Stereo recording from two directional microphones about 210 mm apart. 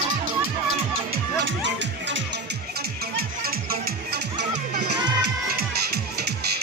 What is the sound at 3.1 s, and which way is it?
Music, 45° right (ahead or behind).